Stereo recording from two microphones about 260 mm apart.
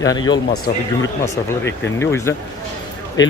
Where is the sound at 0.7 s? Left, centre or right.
Left.